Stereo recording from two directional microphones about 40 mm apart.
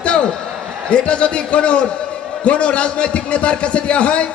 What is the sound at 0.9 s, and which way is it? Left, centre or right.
A man's voice, left.